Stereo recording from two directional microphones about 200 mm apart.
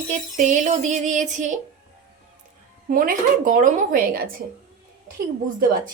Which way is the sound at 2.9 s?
45° right (ahead or behind).